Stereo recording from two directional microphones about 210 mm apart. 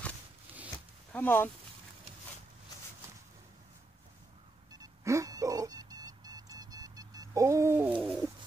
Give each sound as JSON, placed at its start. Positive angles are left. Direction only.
{"t": 1.1, "sound": "speech", "side_deg": 10}
{"t": 4.7, "sound": "music", "side_deg": -15}